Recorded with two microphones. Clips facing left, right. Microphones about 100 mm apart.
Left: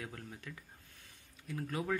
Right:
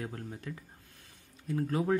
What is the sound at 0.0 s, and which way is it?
Speech, 35° right (ahead or behind).